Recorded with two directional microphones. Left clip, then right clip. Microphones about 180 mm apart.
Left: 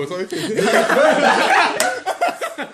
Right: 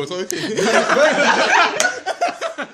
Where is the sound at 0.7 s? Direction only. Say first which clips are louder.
Even; 50° right (ahead or behind).